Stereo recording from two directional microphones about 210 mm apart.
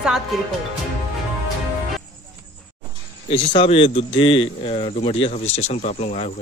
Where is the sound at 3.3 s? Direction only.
25° left (ahead or behind).